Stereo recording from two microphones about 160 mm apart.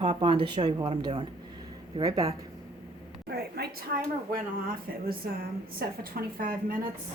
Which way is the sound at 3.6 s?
80° right.